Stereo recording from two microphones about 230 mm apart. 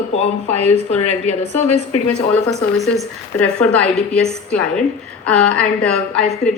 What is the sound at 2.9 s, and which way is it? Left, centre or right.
A woman's voice, centre.